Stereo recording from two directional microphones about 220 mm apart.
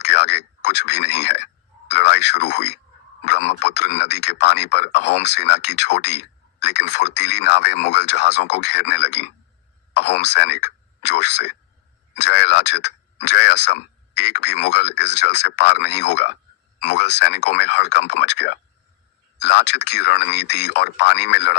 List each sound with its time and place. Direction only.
0.0 s speech: 50° left (ahead or behind)